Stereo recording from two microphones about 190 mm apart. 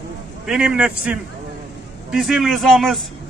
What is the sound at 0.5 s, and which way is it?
A man's voice, 5° right (ahead or behind).